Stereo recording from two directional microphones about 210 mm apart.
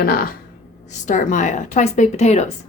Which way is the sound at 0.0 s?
45° left (ahead or behind).